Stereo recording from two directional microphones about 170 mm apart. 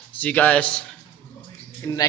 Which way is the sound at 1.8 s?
20° left (ahead or behind).